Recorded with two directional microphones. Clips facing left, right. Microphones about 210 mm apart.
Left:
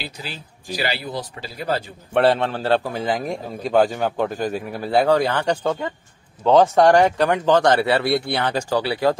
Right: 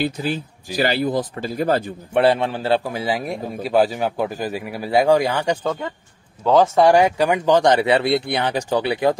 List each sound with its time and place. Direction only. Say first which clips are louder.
0.0 s speech: right 12 dB; 50° right (ahead or behind)
2.1 s a man's voice: right 1 dB; 10° right (ahead or behind)
5.6 s a man's voice: left 1 dB; 5° left (ahead or behind); by 9.2 s 20° right (ahead or behind)